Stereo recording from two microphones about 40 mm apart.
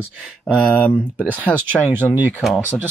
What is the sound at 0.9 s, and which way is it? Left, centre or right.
Speech, left.